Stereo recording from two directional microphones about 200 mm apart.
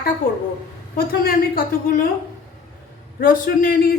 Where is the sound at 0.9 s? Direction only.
45° left (ahead or behind).